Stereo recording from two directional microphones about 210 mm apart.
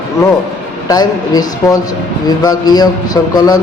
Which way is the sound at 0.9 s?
15° left (ahead or behind).